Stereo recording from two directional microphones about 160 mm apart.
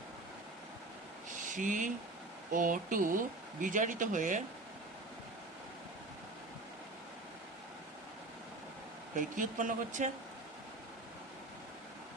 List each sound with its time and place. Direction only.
1.5 s speech: 55° right (ahead or behind)
9.1 s speech: 55° right (ahead or behind)